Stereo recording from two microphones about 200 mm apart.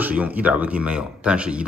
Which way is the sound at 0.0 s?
5° right (ahead or behind).